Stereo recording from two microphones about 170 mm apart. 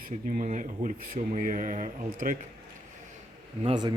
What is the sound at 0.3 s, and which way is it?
Speech, 50° right (ahead or behind).